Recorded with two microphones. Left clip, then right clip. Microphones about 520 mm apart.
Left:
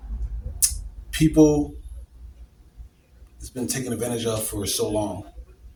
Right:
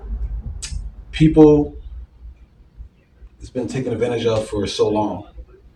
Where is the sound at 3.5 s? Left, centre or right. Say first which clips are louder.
Right 6 dB; left.